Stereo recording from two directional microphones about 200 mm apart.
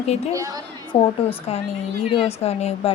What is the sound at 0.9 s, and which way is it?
Speech, 30° left (ahead or behind).